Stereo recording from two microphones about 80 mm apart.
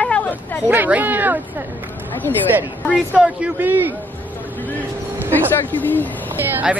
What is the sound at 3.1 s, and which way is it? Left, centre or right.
Speech, centre.